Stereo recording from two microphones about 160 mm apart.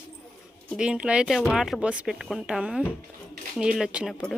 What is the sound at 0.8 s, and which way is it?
Speech, 5° right (ahead or behind).